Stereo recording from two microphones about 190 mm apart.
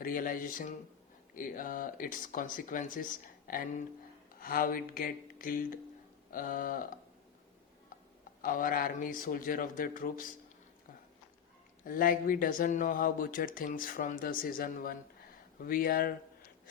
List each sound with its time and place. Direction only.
0.0 s speech: 45° left (ahead or behind)
8.4 s speech: 45° left (ahead or behind)
11.9 s speech: 50° left (ahead or behind)